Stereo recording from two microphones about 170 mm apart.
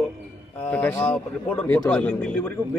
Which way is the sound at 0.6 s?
10° left (ahead or behind).